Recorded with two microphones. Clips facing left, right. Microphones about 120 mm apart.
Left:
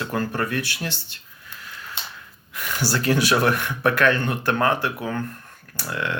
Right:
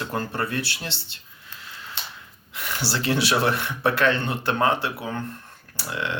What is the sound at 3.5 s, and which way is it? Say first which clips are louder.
Speech: left 2 dB; 25° right (ahead or behind).